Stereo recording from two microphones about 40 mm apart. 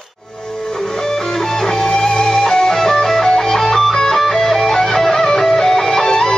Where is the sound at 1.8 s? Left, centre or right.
Centre.